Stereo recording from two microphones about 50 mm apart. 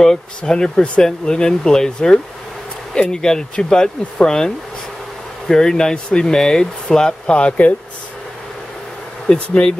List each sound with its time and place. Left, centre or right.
0.4 s speech: centre
5.5 s speech: centre
9.3 s speech: centre